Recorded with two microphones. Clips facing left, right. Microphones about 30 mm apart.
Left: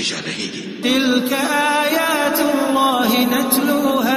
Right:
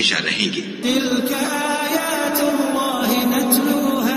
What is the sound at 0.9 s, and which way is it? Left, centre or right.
Mantra, left.